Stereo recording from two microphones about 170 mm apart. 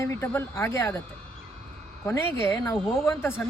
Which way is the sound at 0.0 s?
15° left (ahead or behind).